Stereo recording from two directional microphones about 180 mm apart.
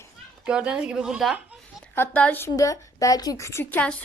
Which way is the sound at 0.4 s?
5° right (ahead or behind).